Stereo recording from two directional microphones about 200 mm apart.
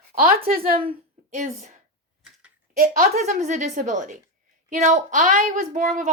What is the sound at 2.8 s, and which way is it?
A woman's voice, 40° right (ahead or behind).